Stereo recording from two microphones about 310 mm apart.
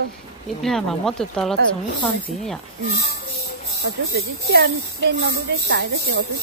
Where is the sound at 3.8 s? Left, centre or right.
Right.